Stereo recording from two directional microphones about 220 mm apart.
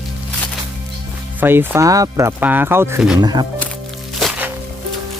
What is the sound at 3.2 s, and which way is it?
Speech, 20° right (ahead or behind).